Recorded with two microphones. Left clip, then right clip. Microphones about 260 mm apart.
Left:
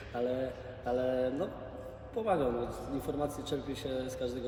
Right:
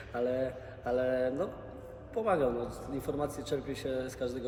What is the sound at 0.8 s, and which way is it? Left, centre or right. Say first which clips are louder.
A man's voice: right 1 dB; centre.